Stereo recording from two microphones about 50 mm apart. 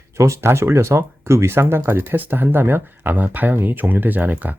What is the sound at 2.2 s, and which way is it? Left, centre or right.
Speech, right.